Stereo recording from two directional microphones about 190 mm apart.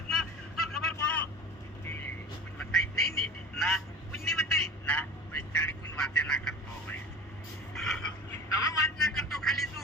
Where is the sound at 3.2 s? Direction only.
Centre (ahead or behind).